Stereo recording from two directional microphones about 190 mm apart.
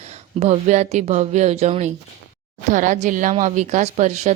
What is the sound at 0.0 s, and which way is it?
A woman's voice, 35° right (ahead or behind).